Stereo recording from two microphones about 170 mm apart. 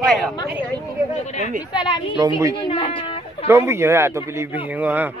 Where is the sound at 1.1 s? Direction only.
45° left (ahead or behind).